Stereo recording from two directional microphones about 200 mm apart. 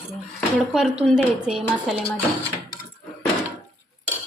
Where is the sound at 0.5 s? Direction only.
5° right (ahead or behind).